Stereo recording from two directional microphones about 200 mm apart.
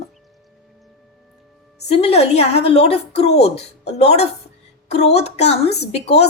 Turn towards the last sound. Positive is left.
turn(degrees=30)  # may be behind; listen again after turning